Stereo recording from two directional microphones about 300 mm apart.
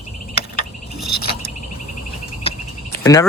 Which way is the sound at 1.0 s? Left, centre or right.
Left.